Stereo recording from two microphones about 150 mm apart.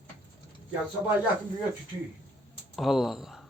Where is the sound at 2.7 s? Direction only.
Centre (ahead or behind).